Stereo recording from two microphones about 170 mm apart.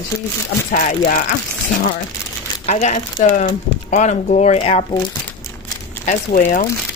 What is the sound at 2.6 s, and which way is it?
Speech, 45° left (ahead or behind).